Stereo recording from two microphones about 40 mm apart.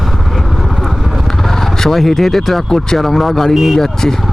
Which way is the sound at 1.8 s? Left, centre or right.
Centre.